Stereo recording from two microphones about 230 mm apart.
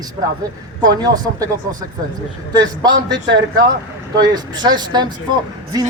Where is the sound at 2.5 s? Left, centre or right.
Centre.